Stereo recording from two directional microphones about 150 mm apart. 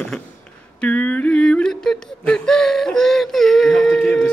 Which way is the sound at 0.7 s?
10° left (ahead or behind).